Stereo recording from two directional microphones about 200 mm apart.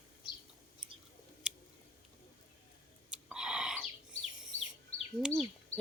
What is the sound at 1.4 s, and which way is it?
Chewing, 5° right (ahead or behind).